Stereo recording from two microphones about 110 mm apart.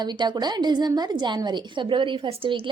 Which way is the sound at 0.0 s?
40° right (ahead or behind).